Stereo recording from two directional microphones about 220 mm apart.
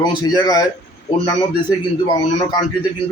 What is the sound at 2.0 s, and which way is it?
Speech, 20° left (ahead or behind).